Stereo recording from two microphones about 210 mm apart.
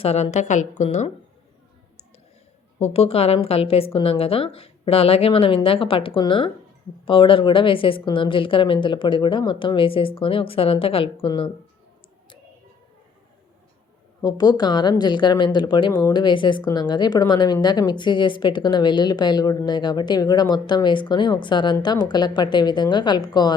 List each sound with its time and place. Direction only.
0.0 s a woman's voice: 30° left (ahead or behind)
2.8 s a woman's voice: 30° left (ahead or behind)
14.2 s a woman's voice: 20° left (ahead or behind)